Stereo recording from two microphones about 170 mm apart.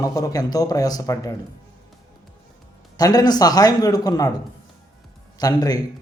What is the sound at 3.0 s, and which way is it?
A man's voice, 20° left (ahead or behind).